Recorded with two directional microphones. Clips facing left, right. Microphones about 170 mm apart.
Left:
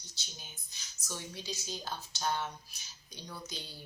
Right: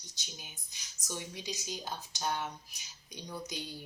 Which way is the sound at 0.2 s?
15° right (ahead or behind).